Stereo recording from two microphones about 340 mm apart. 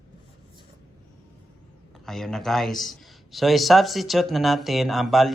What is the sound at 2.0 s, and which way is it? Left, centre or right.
A man's voice, centre.